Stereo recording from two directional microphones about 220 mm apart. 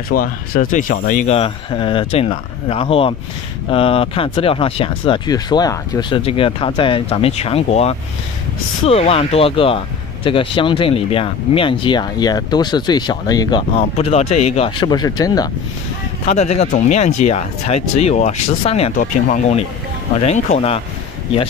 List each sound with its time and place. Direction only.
0.1 s speech: 40° left (ahead or behind); by 15.4 s 15° left (ahead or behind)
16.3 s speech: 30° left (ahead or behind)